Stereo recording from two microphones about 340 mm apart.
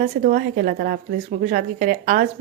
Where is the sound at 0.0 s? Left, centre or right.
Right.